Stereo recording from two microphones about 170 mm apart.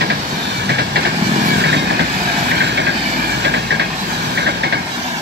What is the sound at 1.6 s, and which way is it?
Vehicle, 90° right.